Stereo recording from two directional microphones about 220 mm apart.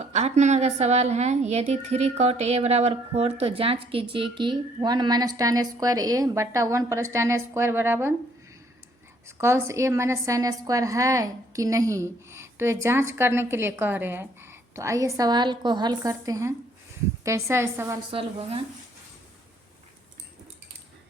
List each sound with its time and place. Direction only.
0.0 s a woman's voice: 30° right (ahead or behind); by 8.1 s 10° right (ahead or behind)
9.2 s a woman's voice: 10° right (ahead or behind)
18.1 s a woman's voice: 25° right (ahead or behind)